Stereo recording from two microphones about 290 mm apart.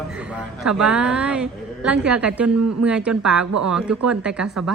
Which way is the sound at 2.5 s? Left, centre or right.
Right.